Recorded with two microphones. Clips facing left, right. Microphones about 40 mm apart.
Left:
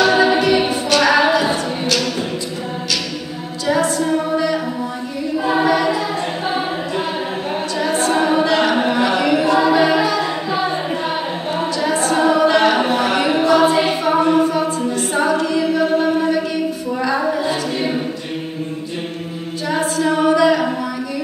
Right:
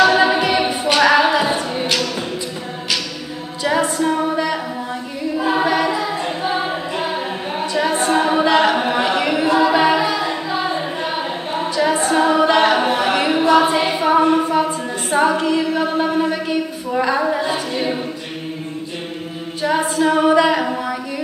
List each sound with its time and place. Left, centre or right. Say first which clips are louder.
0.1 s a capella: left 1 dB; centre
3.6 s a capella: even; right
5.4 s choir: left 1 dB; centre
7.7 s a sound: right 1 dB; right
9.7 s music: left 1 dB; centre
11.8 s a capella: right 1 dB; centre
12.4 s singing: left 1 dB; right
12.8 s a sound: even; centre
13.5 s a capella: even; centre
13.8 s music: right 1 dB; centre
15.1 s a capella: right 3 dB; right
15.8 s a sound: left 2 dB; centre
17.3 s a capella: left 1 dB; centre
19.6 s a capella: right 2 dB; right